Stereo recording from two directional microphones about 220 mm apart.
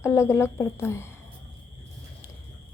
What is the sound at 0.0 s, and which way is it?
A woman's voice, 10° left (ahead or behind).